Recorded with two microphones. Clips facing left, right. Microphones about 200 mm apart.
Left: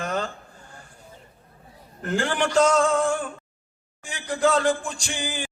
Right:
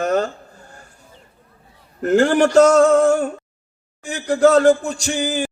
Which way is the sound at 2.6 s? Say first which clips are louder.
Right 7 dB; 65° right (ahead or behind).